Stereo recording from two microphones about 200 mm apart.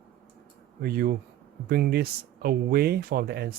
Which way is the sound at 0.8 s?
45° right (ahead or behind).